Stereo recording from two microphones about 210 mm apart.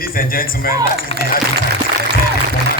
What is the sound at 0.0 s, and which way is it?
Speech, 45° left (ahead or behind).